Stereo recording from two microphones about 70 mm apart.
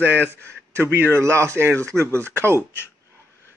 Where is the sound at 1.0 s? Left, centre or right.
Right.